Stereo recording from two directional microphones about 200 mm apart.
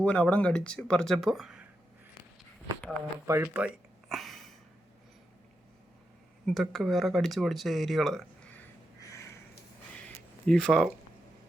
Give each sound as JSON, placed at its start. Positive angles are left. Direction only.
{"t": 0.0, "sound": "speech", "side_deg": 5}
{"t": 3.2, "sound": "speech", "side_deg": -10}
{"t": 4.1, "sound": "a sound", "side_deg": 0}
{"t": 6.4, "sound": "speech", "side_deg": 0}
{"t": 9.0, "sound": "a sound", "side_deg": 15}
{"t": 10.4, "sound": "speech", "side_deg": 5}